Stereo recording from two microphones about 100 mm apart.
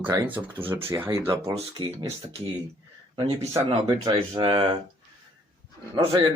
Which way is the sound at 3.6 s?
60° right (ahead or behind).